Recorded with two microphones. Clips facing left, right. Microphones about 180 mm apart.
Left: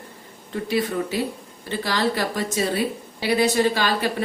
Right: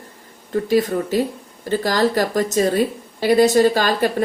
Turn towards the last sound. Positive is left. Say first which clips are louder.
# right 5 dB
turn(degrees=-45)  # may be behind; listen again after turning